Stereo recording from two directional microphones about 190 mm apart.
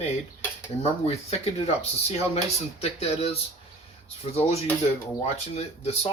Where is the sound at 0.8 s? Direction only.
35° left (ahead or behind).